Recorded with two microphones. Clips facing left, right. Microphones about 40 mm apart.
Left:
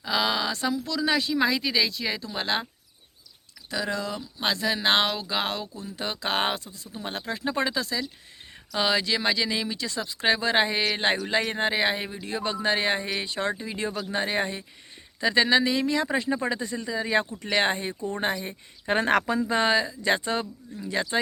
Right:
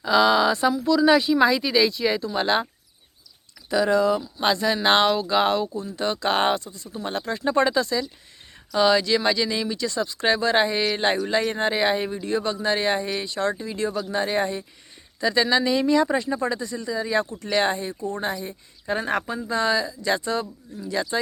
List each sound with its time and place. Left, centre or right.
0.0 s speech: centre
0.5 s speech: centre
3.7 s speech: centre
12.4 s speech: centre
15.6 s speech: centre; by 18.5 s left
18.9 s speech: left
19.5 s speech: left